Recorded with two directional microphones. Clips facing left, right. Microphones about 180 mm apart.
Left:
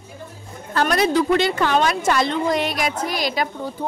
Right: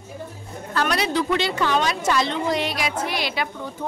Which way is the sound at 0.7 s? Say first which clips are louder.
Left 4 dB; 45° left (ahead or behind).